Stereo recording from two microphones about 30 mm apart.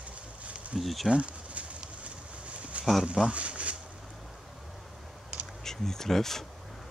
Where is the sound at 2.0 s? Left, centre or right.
Right.